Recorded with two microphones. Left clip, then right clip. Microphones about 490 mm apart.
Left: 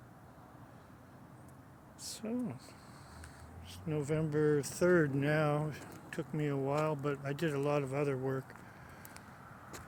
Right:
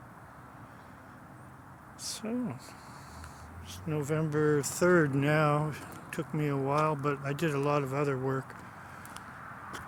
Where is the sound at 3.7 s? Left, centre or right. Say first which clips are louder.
Right 3 dB; left.